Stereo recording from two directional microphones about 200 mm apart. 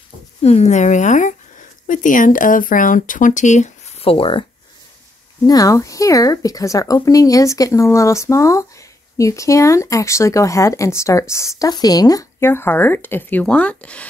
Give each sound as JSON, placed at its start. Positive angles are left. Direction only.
{"t": 0.4, "sound": "speech", "side_deg": 30}
{"t": 5.5, "sound": "speech", "side_deg": 15}